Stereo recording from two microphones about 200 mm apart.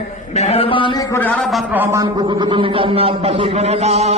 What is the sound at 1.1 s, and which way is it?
Speech, 10° left (ahead or behind).